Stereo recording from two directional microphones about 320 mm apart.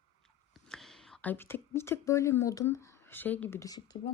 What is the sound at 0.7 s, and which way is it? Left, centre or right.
Speech, centre.